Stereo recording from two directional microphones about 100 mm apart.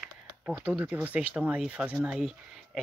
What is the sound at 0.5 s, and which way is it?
Speech, 15° right (ahead or behind).